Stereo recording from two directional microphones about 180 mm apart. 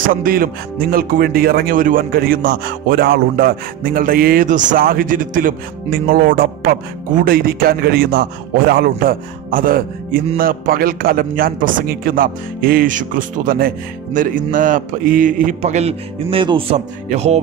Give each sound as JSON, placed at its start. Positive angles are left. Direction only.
{"t": 0.1, "sound": "a man's voice", "side_deg": -50}